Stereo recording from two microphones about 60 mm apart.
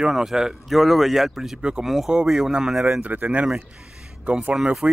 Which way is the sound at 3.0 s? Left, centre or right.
Right.